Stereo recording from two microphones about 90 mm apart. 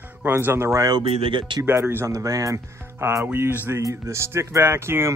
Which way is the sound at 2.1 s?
40° right (ahead or behind).